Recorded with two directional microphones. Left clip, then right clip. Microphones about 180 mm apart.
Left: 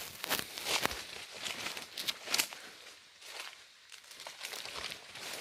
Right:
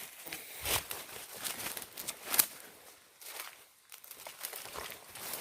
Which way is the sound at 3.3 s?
10° right (ahead or behind).